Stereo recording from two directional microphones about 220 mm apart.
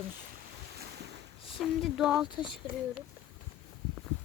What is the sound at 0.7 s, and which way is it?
Boat, 50° right (ahead or behind).